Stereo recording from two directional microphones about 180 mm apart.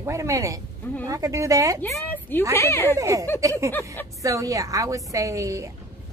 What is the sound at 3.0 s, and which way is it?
Speech, 20° right (ahead or behind).